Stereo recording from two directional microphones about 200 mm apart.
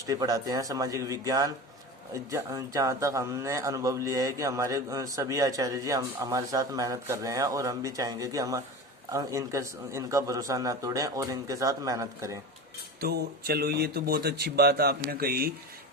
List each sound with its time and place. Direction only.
0.0 s speech: 15° right (ahead or behind)
13.0 s speech: 50° right (ahead or behind)